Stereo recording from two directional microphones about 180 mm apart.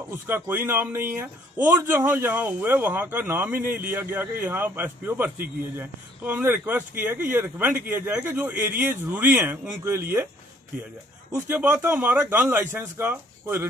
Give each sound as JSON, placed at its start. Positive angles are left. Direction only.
{"t": 0.3, "sound": "a man's voice", "side_deg": -10}
{"t": 11.4, "sound": "a man's voice", "side_deg": -10}